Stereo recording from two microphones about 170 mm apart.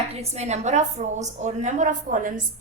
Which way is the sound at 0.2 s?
40° right (ahead or behind).